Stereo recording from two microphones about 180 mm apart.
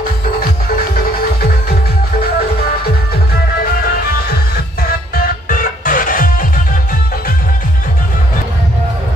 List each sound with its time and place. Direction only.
0.9 s music: 60° left (ahead or behind)
5.1 s music: 50° left (ahead or behind)